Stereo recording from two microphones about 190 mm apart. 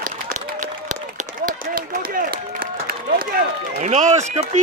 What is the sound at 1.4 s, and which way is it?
Run, 45° right (ahead or behind).